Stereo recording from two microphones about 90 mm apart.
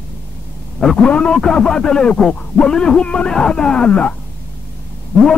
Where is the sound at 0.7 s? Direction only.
10° left (ahead or behind).